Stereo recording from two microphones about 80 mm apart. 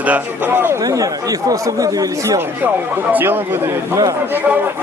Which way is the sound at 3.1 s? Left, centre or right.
Right.